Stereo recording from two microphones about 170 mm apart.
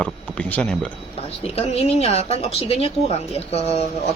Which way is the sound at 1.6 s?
40° left (ahead or behind).